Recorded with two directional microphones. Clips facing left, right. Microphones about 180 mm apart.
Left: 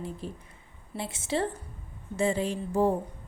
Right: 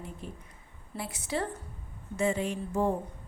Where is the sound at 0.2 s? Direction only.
35° left (ahead or behind).